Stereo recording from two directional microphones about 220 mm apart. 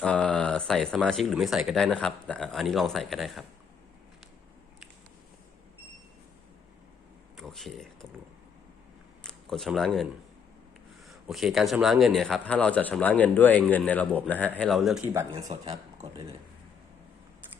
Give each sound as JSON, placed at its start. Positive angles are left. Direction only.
{"t": 0.0, "sound": "a man's voice", "side_deg": 5}
{"t": 7.3, "sound": "speech", "side_deg": 0}
{"t": 9.2, "sound": "speech", "side_deg": 0}
{"t": 11.1, "sound": "a man's voice", "side_deg": 0}
{"t": 15.1, "sound": "speech", "side_deg": -15}
{"t": 15.4, "sound": "speech", "side_deg": -30}